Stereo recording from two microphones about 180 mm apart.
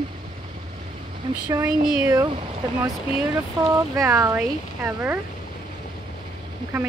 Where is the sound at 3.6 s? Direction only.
20° right (ahead or behind).